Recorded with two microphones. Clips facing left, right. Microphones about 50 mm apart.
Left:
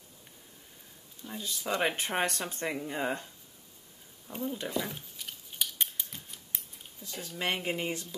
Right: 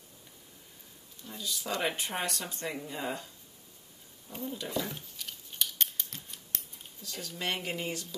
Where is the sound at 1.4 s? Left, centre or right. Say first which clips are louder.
Left 2 dB; left.